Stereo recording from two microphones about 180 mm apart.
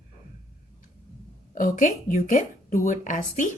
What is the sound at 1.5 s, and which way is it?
Speech, 50° left (ahead or behind).